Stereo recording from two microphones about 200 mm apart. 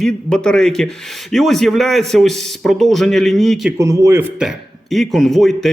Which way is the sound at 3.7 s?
15° right (ahead or behind).